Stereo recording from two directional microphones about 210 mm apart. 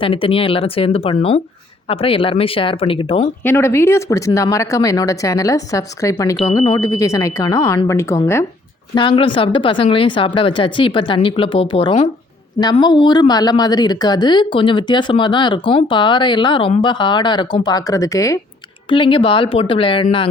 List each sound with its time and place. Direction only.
0.0 s a woman's voice: 25° left (ahead or behind)
3.4 s a woman's voice: 10° left (ahead or behind)